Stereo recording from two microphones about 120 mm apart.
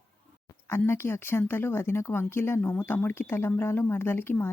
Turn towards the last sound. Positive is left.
turn(degrees=20)  # may be behind; listen again after turning